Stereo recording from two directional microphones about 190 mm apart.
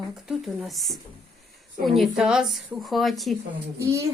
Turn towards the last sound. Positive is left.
turn(degrees=-15)  # may be behind; listen again after turning